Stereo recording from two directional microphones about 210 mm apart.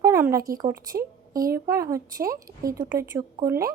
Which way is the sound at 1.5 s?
15° right (ahead or behind).